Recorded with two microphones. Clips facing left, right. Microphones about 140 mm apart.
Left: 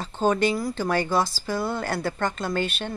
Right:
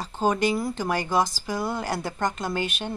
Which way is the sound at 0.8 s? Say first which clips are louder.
Left 1 dB; 15° right (ahead or behind).